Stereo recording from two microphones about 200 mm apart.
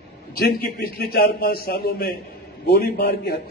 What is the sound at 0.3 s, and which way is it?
A man's voice, 50° left (ahead or behind).